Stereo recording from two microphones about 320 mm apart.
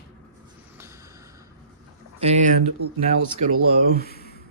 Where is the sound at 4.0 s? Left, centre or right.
Left.